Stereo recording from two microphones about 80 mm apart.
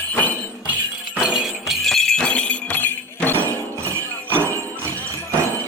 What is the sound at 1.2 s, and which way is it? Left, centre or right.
Music, centre.